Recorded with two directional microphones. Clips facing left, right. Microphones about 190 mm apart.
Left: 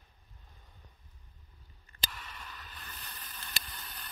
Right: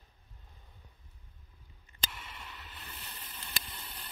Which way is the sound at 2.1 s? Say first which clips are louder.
Even; 25° right (ahead or behind).